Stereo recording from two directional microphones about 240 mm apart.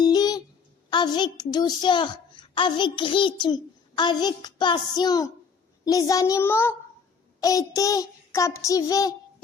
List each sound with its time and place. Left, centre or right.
0.0 s a sound: centre
0.9 s a child's voice: centre
5.8 s child singing: centre